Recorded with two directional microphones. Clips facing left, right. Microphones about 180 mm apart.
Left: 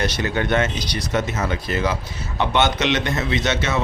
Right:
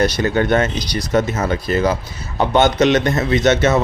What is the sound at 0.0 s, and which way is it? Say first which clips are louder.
A man's voice: right 6 dB; 40° right (ahead or behind).